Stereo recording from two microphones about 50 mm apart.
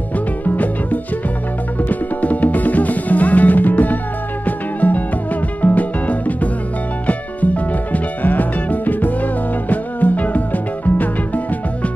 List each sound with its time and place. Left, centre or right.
1.8 s music: left